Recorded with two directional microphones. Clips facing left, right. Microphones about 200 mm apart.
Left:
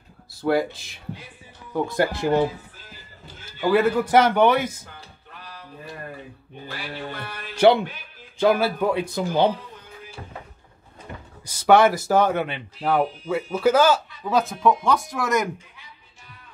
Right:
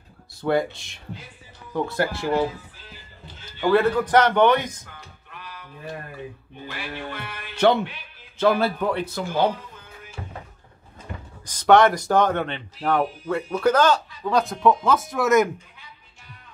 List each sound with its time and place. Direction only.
0.3 s speech: 5° left (ahead or behind)
1.7 s speech: 15° left (ahead or behind)
3.6 s speech: 5° left (ahead or behind)
5.4 s a sound: 35° left (ahead or behind)
6.7 s music: 35° left (ahead or behind)
7.5 s speech: 10° left (ahead or behind)
11.4 s speech: 5° left (ahead or behind)